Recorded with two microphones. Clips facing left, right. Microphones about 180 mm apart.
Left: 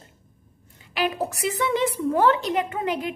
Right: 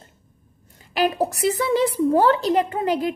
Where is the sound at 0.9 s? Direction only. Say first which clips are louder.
Right 4 dB; 40° right (ahead or behind).